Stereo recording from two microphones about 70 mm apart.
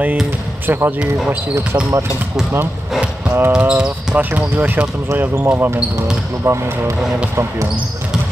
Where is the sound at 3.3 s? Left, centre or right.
Right.